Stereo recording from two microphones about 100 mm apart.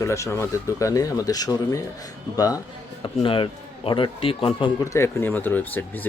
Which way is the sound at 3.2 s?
60° left (ahead or behind).